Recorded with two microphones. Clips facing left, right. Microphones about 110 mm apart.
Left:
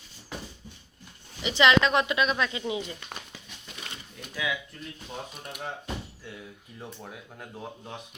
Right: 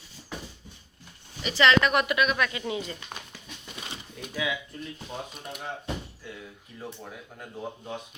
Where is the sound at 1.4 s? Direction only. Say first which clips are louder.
Even; 15° left (ahead or behind).